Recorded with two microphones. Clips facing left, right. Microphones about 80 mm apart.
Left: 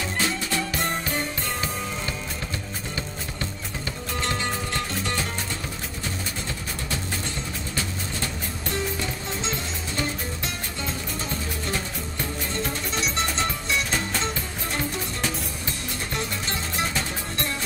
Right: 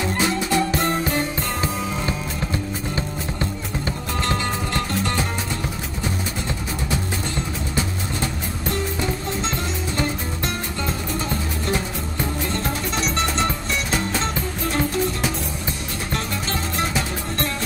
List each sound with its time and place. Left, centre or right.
0.0 s music: right